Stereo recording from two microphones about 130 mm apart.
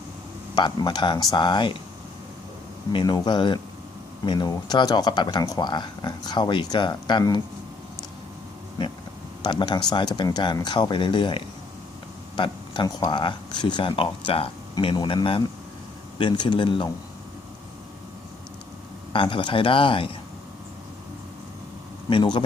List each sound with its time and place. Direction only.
0.5 s speech: 35° left (ahead or behind)
2.9 s speech: 30° left (ahead or behind)
9.4 s speech: 35° left (ahead or behind)
12.4 s a sound: 35° left (ahead or behind)
13.0 s speech: 35° left (ahead or behind)
19.1 s speech: 40° left (ahead or behind)
22.1 s speech: 35° left (ahead or behind)